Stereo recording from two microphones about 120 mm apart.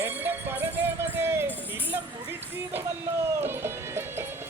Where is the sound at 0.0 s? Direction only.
15° right (ahead or behind).